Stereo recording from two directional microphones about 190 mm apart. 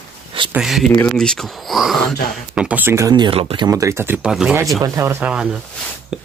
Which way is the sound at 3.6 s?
15° right (ahead or behind).